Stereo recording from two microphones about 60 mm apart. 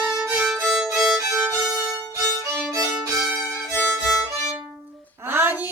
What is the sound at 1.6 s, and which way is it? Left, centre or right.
Violin, right.